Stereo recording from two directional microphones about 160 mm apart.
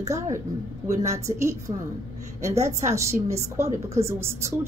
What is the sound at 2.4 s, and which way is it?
Speech, 45° right (ahead or behind).